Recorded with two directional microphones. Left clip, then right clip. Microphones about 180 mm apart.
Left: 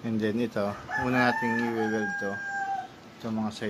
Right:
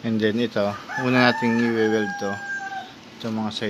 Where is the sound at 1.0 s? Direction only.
35° right (ahead or behind).